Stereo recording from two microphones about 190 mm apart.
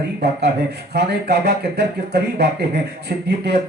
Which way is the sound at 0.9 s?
60° right (ahead or behind).